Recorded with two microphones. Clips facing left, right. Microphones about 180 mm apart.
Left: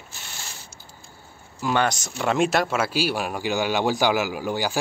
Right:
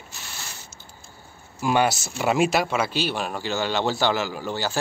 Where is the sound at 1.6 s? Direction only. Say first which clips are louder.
Right 2 dB; 10° right (ahead or behind).